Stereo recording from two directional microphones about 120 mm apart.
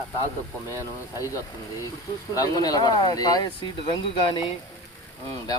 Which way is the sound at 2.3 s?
30° left (ahead or behind).